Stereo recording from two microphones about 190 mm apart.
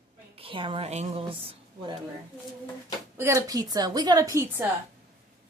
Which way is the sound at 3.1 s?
15° right (ahead or behind).